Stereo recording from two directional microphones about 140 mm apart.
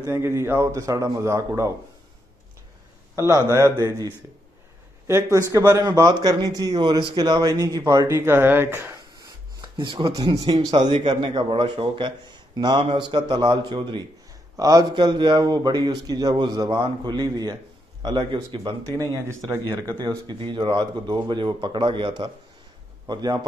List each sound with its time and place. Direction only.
0.0 s a man's voice: 20° right (ahead or behind)
3.3 s a man's voice: 20° right (ahead or behind)
18.9 s a man's voice: 25° right (ahead or behind)